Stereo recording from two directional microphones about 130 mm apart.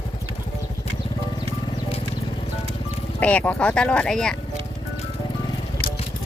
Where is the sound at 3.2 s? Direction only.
10° left (ahead or behind).